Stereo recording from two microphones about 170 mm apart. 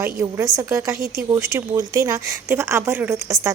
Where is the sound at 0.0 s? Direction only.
15° right (ahead or behind).